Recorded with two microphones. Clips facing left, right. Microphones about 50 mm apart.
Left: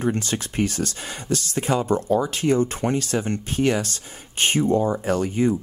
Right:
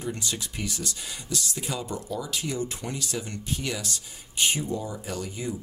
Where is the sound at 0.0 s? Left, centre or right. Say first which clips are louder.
Left 8 dB; left.